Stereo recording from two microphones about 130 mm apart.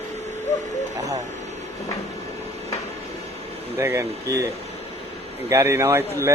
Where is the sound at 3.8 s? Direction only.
20° right (ahead or behind).